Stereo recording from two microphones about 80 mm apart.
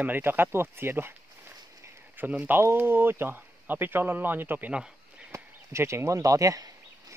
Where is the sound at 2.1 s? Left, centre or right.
Right.